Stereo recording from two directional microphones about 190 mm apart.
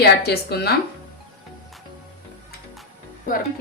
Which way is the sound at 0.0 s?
55° left (ahead or behind).